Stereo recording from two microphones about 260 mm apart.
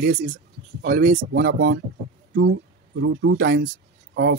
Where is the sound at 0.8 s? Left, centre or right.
Right.